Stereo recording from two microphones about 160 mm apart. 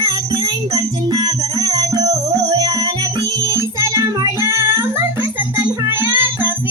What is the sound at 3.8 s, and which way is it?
Child singing, 20° right (ahead or behind).